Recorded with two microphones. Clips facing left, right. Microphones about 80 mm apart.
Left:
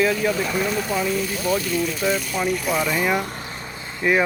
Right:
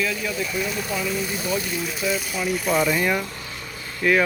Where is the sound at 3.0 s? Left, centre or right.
Centre.